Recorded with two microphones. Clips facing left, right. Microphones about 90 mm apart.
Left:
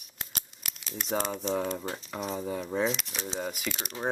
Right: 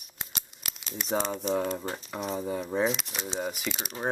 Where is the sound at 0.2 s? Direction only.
5° right (ahead or behind).